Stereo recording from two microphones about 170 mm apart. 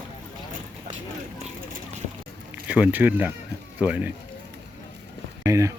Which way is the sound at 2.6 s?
10° right (ahead or behind).